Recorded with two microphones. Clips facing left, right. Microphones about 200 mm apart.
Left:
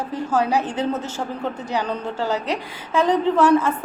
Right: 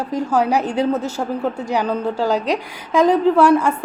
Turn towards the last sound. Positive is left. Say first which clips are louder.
# right 3 dB
turn(degrees=-10)  # may be behind; listen again after turning